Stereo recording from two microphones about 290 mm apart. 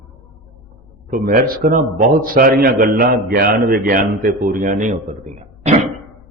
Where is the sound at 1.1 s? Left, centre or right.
Right.